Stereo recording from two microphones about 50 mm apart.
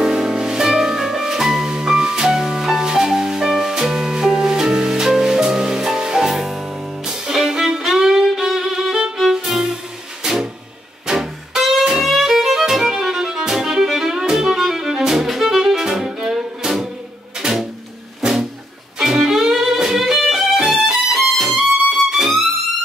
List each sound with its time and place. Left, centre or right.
0.0 s music: centre
6.3 s music: centre
9.2 s violin: centre
10.2 s music: centre
12.0 s violin: centre
13.8 s music: centre
18.2 s music: centre